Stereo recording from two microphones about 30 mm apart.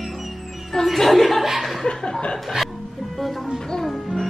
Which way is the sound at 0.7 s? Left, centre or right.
Centre.